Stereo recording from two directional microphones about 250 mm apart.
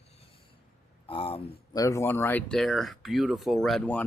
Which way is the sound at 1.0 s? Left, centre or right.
Left.